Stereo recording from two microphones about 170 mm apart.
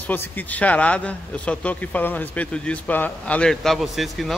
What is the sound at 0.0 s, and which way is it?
Speech, 10° left (ahead or behind).